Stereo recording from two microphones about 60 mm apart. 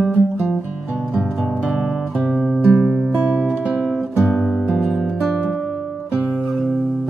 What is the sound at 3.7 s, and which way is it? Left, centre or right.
Music, centre.